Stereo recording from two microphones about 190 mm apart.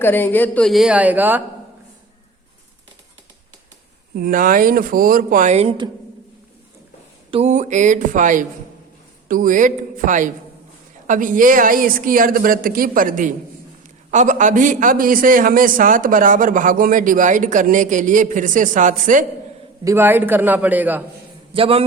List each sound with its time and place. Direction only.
0.0 s speech: 10° left (ahead or behind); by 1.4 s 10° right (ahead or behind)
4.1 s a man's voice: 50° right (ahead or behind); by 5.9 s 25° right (ahead or behind)
7.3 s a woman's voice: 35° right (ahead or behind)
19.8 s a man's voice: 15° right (ahead or behind)
21.5 s a woman's voice: 30° right (ahead or behind)